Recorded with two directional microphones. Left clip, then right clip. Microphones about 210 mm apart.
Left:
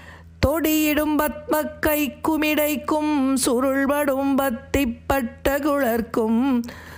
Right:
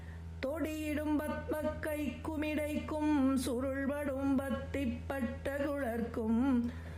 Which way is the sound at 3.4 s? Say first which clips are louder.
Left 15 dB; 40° left (ahead or behind).